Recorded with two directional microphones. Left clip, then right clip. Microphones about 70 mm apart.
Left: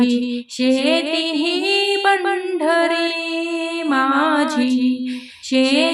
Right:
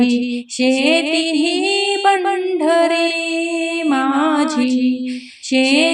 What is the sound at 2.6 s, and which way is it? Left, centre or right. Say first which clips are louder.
Mantra: right 3 dB; right.